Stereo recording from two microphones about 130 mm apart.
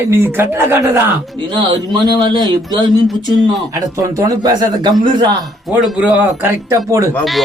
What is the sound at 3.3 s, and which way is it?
Speech, 25° right (ahead or behind).